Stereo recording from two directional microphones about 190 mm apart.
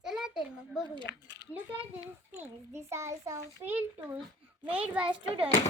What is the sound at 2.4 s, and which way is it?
A child's voice, 15° right (ahead or behind).